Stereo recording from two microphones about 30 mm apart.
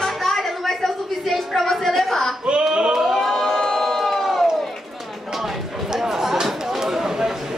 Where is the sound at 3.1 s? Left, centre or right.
Centre.